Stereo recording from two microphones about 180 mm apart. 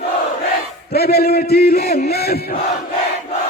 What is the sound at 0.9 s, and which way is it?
Chant, 60° left (ahead or behind).